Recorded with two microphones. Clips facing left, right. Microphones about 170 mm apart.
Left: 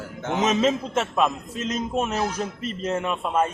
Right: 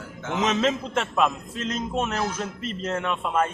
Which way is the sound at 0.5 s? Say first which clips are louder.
Left 2 dB; 5° left (ahead or behind).